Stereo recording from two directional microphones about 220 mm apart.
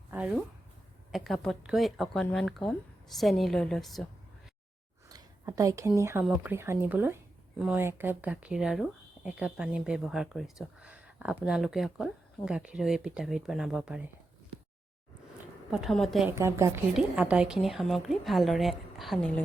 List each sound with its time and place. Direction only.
0.1 s speech: 5° right (ahead or behind)
5.0 s speech: 15° right (ahead or behind)
15.7 s speech: centre (ahead or behind)
16.4 s speech: 10° right (ahead or behind)